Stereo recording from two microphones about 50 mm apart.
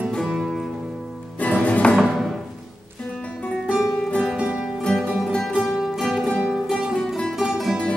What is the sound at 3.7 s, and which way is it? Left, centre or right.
Music, centre.